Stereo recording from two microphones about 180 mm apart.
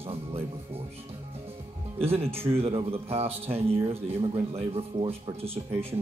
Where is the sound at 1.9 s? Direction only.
35° right (ahead or behind).